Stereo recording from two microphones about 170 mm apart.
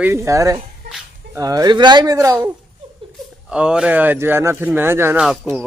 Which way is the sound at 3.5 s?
5° right (ahead or behind).